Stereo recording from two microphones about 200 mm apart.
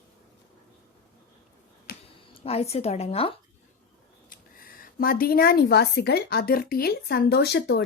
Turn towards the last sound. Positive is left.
turn(degrees=55)  # may be behind; listen again after turning